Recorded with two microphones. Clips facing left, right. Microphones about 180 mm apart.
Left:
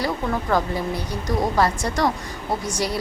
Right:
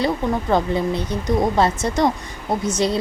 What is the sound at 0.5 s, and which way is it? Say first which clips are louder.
A woman's voice: right 4 dB; 20° right (ahead or behind).